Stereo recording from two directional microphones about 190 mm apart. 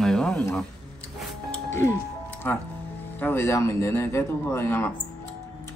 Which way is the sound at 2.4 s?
10° left (ahead or behind).